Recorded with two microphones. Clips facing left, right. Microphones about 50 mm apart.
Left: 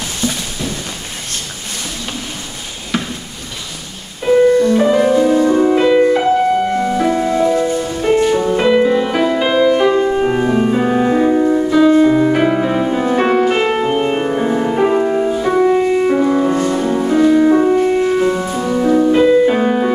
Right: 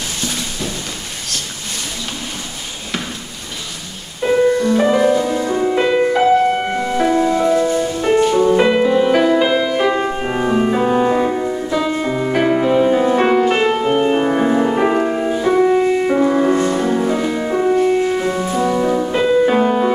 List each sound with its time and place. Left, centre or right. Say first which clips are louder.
4.3 s music: left 4 dB; centre
6.5 s music: left 4 dB; right
7.0 s music: right 2 dB; centre
9.9 s music: left 5 dB; centre
14.3 s music: right 1 dB; centre